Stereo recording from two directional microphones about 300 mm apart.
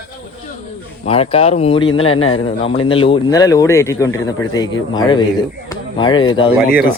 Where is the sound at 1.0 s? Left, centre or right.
Centre.